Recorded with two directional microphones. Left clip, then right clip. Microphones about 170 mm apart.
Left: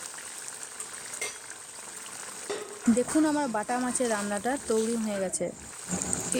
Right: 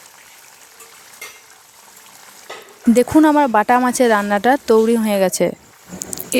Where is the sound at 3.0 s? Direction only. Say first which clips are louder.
Right 15 dB; 65° right (ahead or behind).